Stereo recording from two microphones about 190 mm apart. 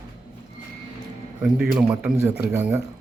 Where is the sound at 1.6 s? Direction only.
5° right (ahead or behind).